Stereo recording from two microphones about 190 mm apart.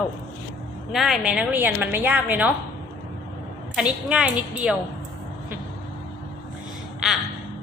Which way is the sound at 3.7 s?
5° right (ahead or behind).